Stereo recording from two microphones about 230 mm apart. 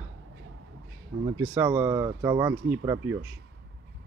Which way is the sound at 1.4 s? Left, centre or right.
Centre.